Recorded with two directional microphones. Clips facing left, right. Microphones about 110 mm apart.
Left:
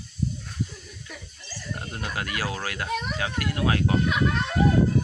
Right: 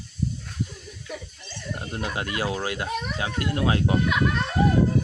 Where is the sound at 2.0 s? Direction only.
25° right (ahead or behind).